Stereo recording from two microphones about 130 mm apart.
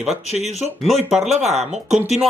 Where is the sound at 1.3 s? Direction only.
60° right (ahead or behind).